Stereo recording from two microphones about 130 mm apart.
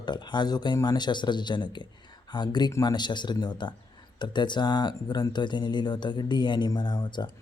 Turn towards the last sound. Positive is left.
turn(degrees=35)  # may be behind; listen again after turning